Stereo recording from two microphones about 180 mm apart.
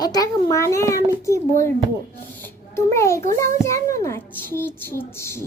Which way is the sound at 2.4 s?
15° left (ahead or behind).